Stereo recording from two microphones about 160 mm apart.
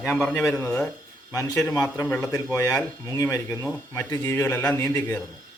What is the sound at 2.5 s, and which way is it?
Speech, 20° left (ahead or behind).